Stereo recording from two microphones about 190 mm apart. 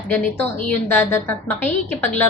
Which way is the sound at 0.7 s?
10° left (ahead or behind).